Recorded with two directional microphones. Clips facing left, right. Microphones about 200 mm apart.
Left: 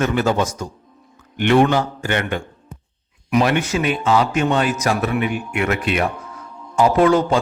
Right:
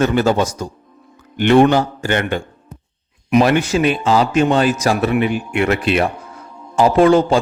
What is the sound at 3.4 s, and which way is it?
Speech, 30° right (ahead or behind).